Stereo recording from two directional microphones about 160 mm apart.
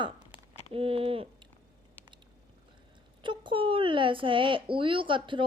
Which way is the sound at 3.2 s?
30° right (ahead or behind).